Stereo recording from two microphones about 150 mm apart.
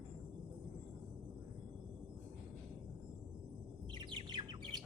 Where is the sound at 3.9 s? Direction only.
30° right (ahead or behind).